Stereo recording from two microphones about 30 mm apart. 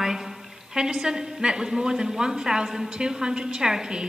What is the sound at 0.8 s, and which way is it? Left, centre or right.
A woman's voice, right.